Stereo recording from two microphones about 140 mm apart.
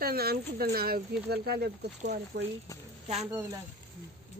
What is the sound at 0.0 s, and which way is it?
Speech, 90° right.